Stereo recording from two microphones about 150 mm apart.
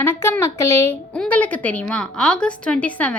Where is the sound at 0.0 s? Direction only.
15° left (ahead or behind).